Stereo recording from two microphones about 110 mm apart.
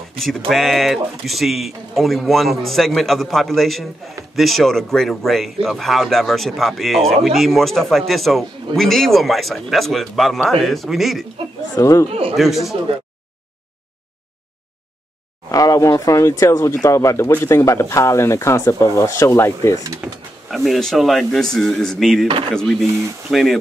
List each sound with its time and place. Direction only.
0.5 s a man's voice: centre (ahead or behind)
11.7 s speech: 30° left (ahead or behind)
12.1 s a man's voice: 55° right (ahead or behind)
12.4 s a man's voice: centre (ahead or behind)
15.5 s speech: 30° left (ahead or behind)
20.0 s speech: 10° right (ahead or behind)
20.5 s a man's voice: centre (ahead or behind)